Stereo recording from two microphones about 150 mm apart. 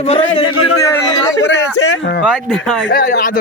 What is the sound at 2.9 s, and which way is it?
Speech, 85° left.